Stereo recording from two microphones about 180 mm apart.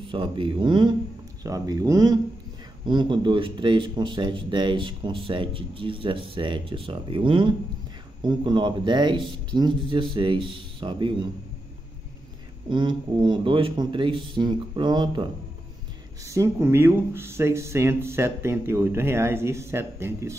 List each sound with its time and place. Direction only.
0.0 s speech: 30° right (ahead or behind)
12.6 s speech: 25° right (ahead or behind)
16.3 s speech: 15° right (ahead or behind)